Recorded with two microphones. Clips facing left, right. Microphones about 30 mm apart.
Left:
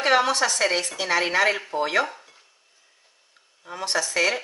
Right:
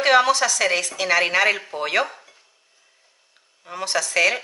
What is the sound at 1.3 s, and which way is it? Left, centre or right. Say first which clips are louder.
Speech: right 2 dB; right.